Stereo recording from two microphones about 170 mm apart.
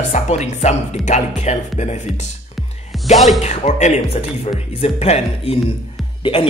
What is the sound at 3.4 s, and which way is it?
Speech, 40° left (ahead or behind).